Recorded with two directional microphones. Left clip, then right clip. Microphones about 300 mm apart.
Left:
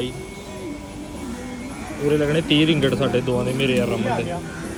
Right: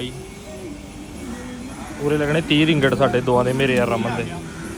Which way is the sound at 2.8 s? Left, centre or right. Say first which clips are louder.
Right 4 dB; centre.